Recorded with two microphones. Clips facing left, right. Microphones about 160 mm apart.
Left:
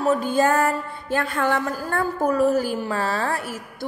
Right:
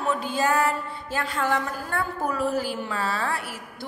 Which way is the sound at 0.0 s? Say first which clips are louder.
Left 6 dB; 45° left (ahead or behind).